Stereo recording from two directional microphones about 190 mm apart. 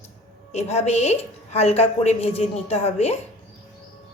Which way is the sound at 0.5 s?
35° left (ahead or behind).